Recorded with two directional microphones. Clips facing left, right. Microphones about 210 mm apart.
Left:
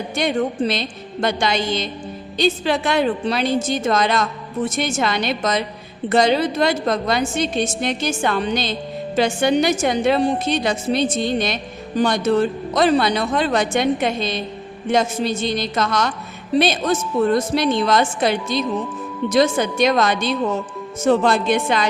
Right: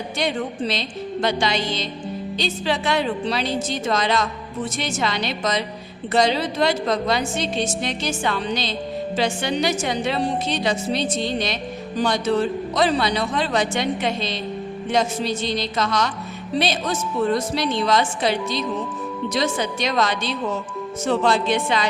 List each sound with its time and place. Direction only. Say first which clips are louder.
0.2 s a woman's voice: left 5 dB; 50° left (ahead or behind)